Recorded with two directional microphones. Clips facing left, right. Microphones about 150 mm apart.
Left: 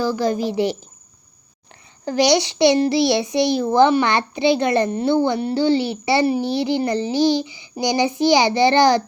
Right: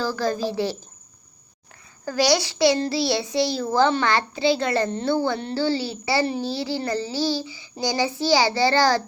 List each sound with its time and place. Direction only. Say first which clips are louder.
0.0 s a child's voice: left 4 dB; 15° left (ahead or behind)
2.0 s a child's voice: left 4 dB; 20° left (ahead or behind)